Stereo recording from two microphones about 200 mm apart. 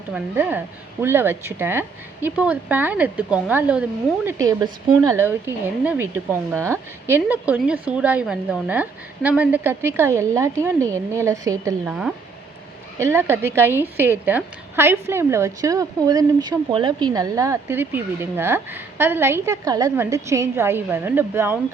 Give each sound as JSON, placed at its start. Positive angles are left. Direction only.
{"t": 0.1, "sound": "a woman's voice", "side_deg": -10}
{"t": 11.9, "sound": "a woman's voice", "side_deg": -5}